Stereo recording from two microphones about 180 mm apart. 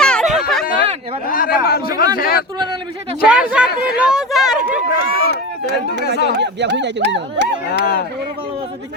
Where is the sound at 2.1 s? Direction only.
55° left (ahead or behind).